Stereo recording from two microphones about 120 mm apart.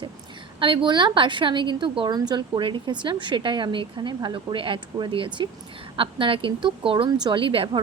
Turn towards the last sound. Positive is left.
turn(degrees=-40)  # may be behind; listen again after turning